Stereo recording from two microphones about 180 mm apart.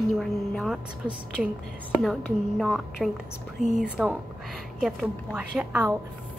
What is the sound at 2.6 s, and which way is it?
A woman's voice, centre (ahead or behind).